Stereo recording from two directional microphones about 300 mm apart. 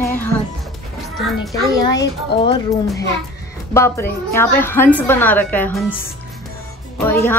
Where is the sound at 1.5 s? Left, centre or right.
Centre.